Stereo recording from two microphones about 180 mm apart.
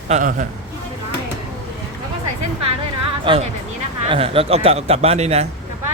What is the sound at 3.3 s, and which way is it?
Speech, 25° right (ahead or behind).